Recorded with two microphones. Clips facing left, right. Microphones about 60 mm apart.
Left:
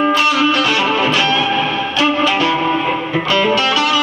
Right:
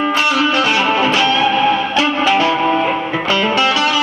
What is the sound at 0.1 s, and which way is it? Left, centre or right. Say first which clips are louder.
Music: left 1 dB; right.